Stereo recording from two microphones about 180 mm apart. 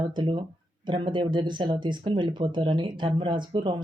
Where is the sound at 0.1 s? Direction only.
25° right (ahead or behind).